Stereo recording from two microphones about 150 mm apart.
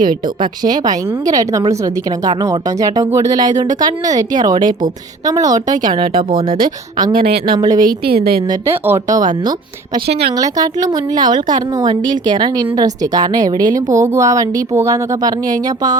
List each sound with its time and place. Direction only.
0.6 s a woman's voice: 25° right (ahead or behind)
5.7 s a woman's voice: 65° right (ahead or behind)
7.0 s speech: 35° right (ahead or behind)
7.9 s a woman's voice: 90° right
8.6 s a woman's voice: 15° right (ahead or behind)
10.3 s a woman's voice: 25° right (ahead or behind)